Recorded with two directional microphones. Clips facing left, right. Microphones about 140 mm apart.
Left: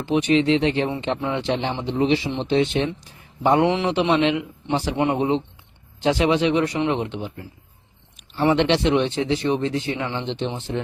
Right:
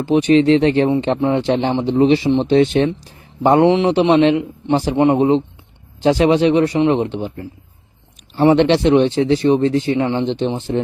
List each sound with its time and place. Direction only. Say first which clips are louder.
0.0 s speech: right 6 dB; 40° right (ahead or behind)
0.9 s speech: right 8 dB; 30° right (ahead or behind)
3.6 s speech: right 7 dB; 25° right (ahead or behind)
8.4 s speech: right 6 dB; 40° right (ahead or behind)